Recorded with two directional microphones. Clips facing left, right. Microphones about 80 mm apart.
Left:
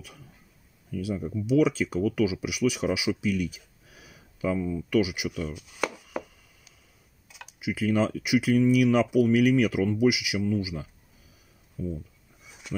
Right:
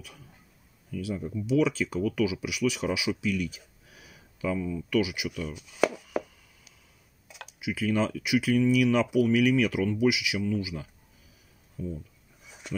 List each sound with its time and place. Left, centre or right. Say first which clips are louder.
0.9 s speech: left 2 dB; centre
5.8 s a sound: right 5 dB; centre
7.8 s speech: left 2 dB; left
11.8 s speech: left 2 dB; left